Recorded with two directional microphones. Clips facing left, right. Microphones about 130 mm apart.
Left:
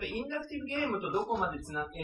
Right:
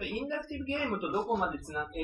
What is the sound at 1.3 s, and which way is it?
Speech, 5° right (ahead or behind).